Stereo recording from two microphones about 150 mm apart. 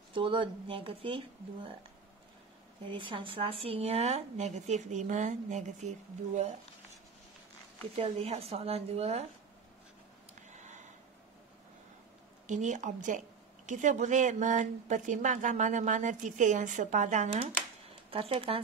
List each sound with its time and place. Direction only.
0.1 s speech: 35° right (ahead or behind)
2.9 s speech: 35° right (ahead or behind); by 6.5 s 50° right (ahead or behind)
7.9 s speech: 45° right (ahead or behind)
10.5 s a sound: 55° right (ahead or behind)
12.4 s a woman's voice: 55° right (ahead or behind)
18.1 s speech: 40° right (ahead or behind)